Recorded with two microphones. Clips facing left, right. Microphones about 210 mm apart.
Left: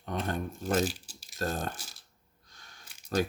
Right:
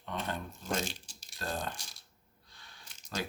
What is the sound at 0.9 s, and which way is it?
Crumpling, 5° left (ahead or behind).